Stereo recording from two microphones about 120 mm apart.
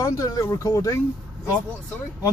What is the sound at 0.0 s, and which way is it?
Speech, 30° left (ahead or behind).